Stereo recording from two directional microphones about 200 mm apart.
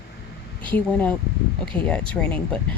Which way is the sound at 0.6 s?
5° left (ahead or behind).